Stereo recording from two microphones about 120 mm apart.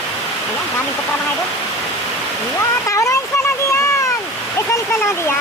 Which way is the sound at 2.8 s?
25° left (ahead or behind).